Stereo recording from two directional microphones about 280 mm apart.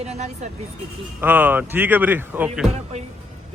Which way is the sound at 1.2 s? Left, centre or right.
Centre.